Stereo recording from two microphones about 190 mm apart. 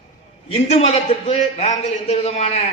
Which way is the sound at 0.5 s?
35° left (ahead or behind).